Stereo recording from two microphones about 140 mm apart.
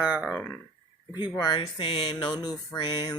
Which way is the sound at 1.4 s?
35° left (ahead or behind).